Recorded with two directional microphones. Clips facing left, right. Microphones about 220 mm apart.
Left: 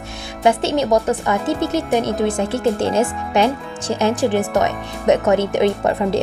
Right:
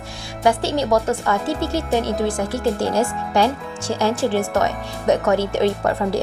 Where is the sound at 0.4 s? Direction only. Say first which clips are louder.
Left 2 dB; 20° left (ahead or behind).